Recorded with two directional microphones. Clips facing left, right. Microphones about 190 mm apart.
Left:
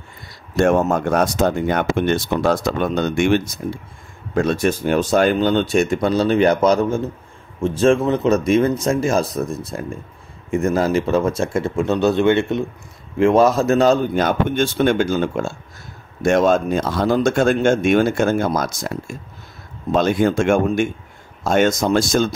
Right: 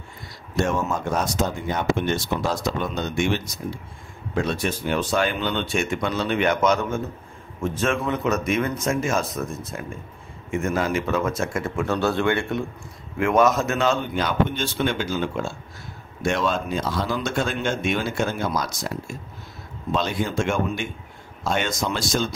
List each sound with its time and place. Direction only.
0.6 s speech: 55° left (ahead or behind)